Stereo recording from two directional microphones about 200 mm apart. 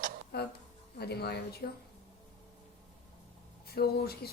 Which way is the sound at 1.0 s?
55° left (ahead or behind).